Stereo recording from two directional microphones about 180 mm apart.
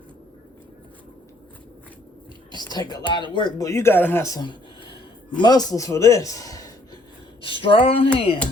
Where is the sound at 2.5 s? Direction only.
25° left (ahead or behind).